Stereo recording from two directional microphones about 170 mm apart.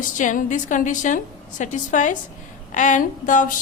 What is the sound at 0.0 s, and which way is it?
A woman's voice, 50° left (ahead or behind).